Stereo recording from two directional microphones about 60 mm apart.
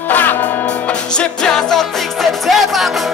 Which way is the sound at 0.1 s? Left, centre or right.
Left.